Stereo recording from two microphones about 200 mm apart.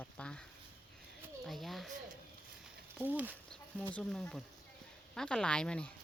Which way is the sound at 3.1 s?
10° right (ahead or behind).